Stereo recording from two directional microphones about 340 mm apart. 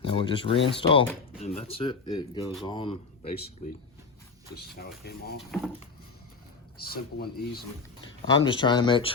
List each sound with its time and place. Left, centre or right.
0.0 s speech: centre
4.5 s speech: left
5.4 s speech: centre
6.7 s speech: left
8.4 s speech: centre